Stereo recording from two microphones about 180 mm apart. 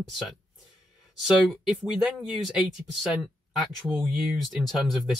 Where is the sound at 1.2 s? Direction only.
Centre (ahead or behind).